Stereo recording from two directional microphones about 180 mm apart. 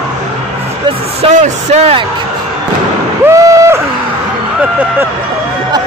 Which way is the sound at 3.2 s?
20° right (ahead or behind).